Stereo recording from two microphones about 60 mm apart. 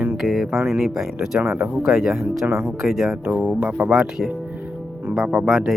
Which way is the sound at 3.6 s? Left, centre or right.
Right.